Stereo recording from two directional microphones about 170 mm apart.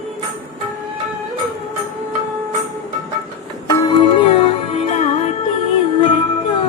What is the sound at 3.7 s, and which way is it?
Music, 20° left (ahead or behind).